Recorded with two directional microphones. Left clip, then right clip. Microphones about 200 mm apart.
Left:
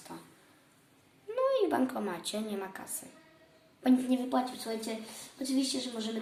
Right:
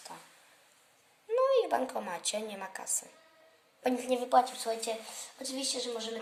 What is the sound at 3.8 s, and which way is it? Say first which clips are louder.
Speech: left 1 dB; 45° right (ahead or behind).